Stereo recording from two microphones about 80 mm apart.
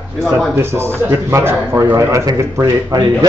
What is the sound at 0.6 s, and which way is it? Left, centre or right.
A man's voice, right.